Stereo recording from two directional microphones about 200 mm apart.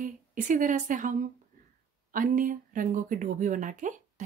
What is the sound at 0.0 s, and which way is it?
A woman's voice, 40° right (ahead or behind).